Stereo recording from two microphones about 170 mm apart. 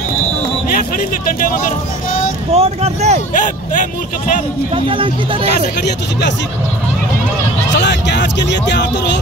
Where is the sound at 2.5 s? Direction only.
40° right (ahead or behind).